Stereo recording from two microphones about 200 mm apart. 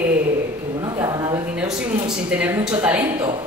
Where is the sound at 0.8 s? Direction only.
20° right (ahead or behind).